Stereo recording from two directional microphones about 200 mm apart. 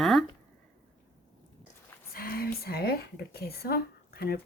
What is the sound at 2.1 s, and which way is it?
Speech, 50° left (ahead or behind).